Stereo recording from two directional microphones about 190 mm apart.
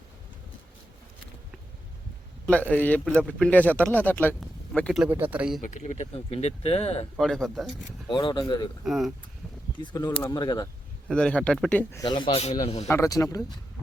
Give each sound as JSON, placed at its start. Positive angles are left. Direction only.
{"t": 2.5, "sound": "a man's voice", "side_deg": 5}
{"t": 5.0, "sound": "speech", "side_deg": -10}
{"t": 5.6, "sound": "speech", "side_deg": 40}
{"t": 7.2, "sound": "speech", "side_deg": 0}
{"t": 8.0, "sound": "speech", "side_deg": 25}
{"t": 8.8, "sound": "speech", "side_deg": 0}
{"t": 9.8, "sound": "a man's voice", "side_deg": 20}
{"t": 11.1, "sound": "a man's voice", "side_deg": 5}
{"t": 12.9, "sound": "speech", "side_deg": 15}